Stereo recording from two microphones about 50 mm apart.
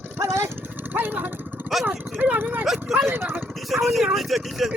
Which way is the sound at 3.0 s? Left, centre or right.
Right.